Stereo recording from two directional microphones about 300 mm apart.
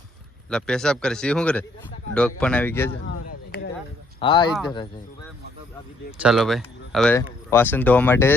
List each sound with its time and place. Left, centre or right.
0.5 s speech: centre
4.2 s speech: centre
6.1 s speech: centre